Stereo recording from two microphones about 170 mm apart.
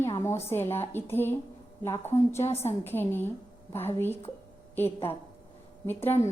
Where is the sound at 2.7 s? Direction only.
10° left (ahead or behind).